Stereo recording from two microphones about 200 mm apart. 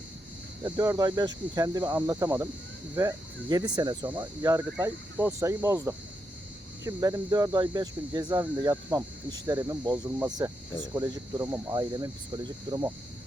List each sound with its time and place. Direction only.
0.6 s speech: 20° right (ahead or behind)